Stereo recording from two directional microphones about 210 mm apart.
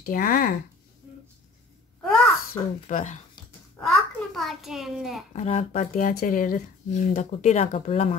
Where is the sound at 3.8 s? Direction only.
Centre (ahead or behind).